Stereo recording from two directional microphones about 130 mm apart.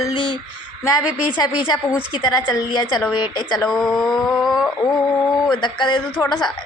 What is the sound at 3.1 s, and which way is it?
Speech, 35° left (ahead or behind).